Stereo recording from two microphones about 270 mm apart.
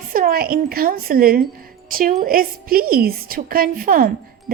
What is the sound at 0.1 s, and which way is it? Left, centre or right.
Speech, right.